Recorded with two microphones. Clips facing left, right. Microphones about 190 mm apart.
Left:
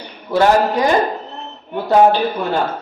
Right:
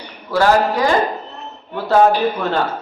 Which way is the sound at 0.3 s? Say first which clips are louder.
Left 1 dB; 20° left (ahead or behind).